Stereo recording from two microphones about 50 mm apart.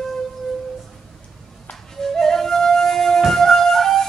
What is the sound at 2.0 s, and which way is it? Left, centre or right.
Flute, centre.